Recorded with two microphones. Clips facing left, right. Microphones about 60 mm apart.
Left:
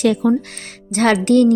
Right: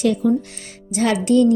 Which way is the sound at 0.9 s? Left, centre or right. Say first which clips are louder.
Left 3 dB; left.